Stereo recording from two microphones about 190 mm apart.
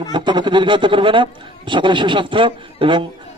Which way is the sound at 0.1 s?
25° right (ahead or behind).